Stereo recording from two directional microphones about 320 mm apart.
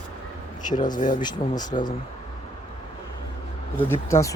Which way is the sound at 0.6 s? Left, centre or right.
Left.